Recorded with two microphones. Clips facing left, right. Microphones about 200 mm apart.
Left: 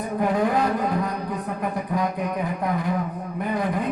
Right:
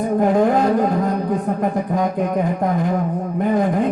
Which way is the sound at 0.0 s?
45° right (ahead or behind).